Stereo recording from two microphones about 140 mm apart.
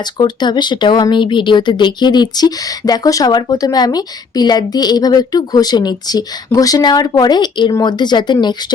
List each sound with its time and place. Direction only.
0.2 s speech: 30° left (ahead or behind)